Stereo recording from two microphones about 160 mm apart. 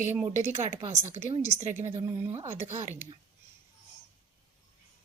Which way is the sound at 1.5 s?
50° right (ahead or behind).